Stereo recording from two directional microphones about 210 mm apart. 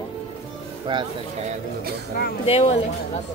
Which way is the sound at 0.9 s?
20° right (ahead or behind).